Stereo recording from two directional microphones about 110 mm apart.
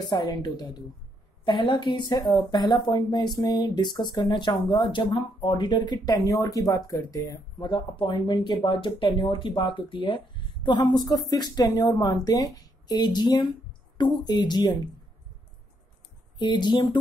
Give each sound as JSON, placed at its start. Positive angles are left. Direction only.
{"t": 0.1, "sound": "speech", "side_deg": 35}
{"t": 16.3, "sound": "speech", "side_deg": 40}